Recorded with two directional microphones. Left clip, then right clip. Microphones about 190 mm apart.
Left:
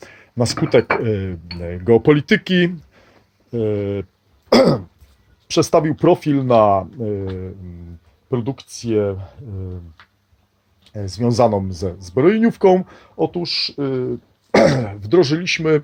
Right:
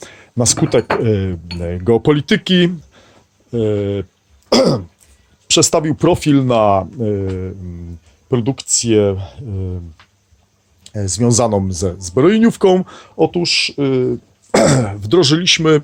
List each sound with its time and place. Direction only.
0.0 s speech: 15° right (ahead or behind)
4.4 s throat clearing: 10° right (ahead or behind)
5.5 s speech: 15° right (ahead or behind)
8.3 s speech: 20° right (ahead or behind)
10.9 s speech: 20° right (ahead or behind)